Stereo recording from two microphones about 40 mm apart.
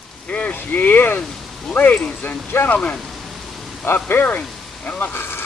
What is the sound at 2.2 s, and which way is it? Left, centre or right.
Speech, left.